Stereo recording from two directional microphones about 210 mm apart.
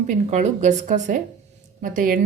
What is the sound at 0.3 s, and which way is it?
A woman's voice, 35° right (ahead or behind).